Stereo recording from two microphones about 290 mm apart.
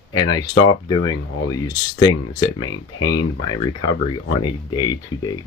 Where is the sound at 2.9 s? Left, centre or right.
Left.